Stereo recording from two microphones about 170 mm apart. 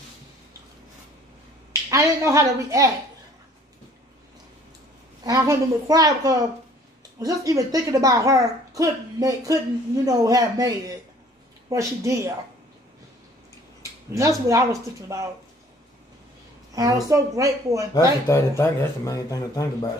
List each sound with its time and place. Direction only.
1.9 s speech: 20° right (ahead or behind)
5.2 s speech: 20° right (ahead or behind)
14.1 s speech: 20° right (ahead or behind)
16.7 s speech: 20° right (ahead or behind)
17.9 s speech: 15° left (ahead or behind)